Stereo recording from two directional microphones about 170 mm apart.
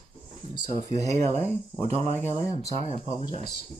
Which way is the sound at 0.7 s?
40° right (ahead or behind).